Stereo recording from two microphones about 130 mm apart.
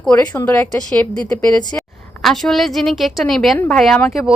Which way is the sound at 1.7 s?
15° left (ahead or behind).